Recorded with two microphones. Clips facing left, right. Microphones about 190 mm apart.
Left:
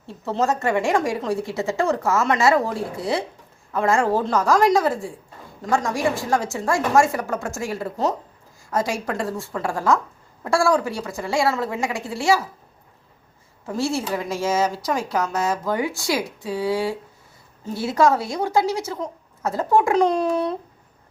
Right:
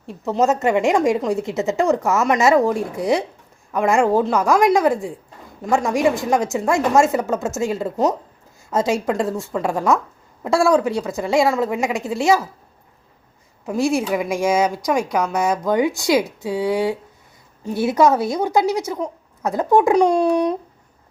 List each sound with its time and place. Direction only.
0.1 s a woman's voice: 15° right (ahead or behind)
13.7 s a child's voice: 15° right (ahead or behind)